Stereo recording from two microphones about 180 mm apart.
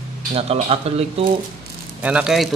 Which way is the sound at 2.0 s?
5° right (ahead or behind).